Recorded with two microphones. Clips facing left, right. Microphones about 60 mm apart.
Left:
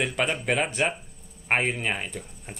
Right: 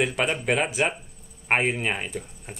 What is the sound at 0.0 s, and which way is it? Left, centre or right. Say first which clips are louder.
Speech: right 2 dB; centre.